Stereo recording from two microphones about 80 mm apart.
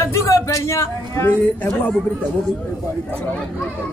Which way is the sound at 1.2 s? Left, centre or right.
Left.